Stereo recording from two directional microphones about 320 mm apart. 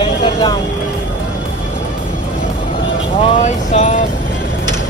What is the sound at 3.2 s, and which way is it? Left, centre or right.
Vehicle, centre.